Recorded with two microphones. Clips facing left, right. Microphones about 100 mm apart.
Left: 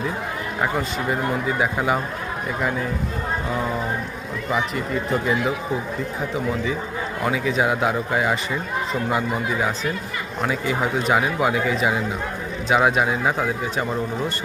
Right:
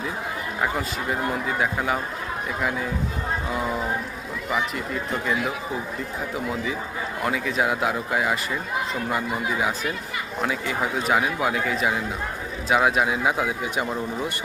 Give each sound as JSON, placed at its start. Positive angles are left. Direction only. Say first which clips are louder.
{"t": 0.6, "sound": "speech", "louder": "left 3 dB", "side_deg": 0}